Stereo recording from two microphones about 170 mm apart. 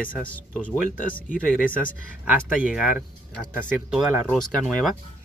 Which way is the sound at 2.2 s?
5° right (ahead or behind).